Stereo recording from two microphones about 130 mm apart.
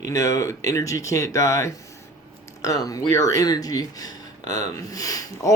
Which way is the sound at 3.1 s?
25° left (ahead or behind).